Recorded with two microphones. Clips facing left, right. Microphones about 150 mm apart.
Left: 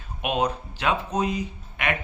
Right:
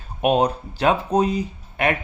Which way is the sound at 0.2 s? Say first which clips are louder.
Right 7 dB; 35° right (ahead or behind).